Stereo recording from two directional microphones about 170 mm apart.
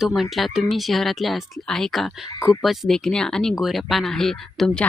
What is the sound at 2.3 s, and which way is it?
Speech, 20° left (ahead or behind).